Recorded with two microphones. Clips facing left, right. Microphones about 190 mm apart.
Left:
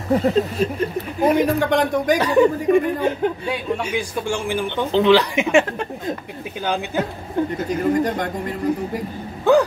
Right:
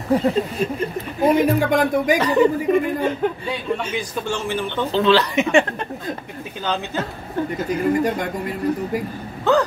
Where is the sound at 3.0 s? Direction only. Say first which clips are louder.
Left 1 dB; 10° left (ahead or behind).